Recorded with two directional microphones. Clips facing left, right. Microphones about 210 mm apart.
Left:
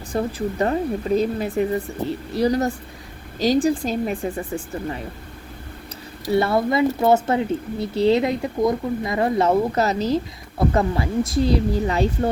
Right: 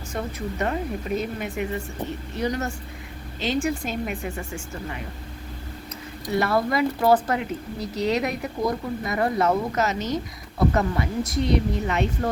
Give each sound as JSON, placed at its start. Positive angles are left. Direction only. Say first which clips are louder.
{"t": 0.1, "sound": "speech", "louder": "left 7 dB", "side_deg": 30}
{"t": 6.3, "sound": "speech", "louder": "left 4 dB", "side_deg": 25}